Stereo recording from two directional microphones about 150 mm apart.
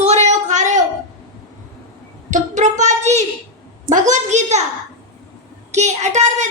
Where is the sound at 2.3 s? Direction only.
55° right (ahead or behind).